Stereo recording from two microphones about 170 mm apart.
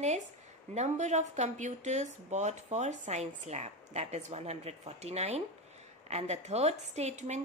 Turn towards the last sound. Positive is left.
turn(degrees=-40)  # may be behind; listen again after turning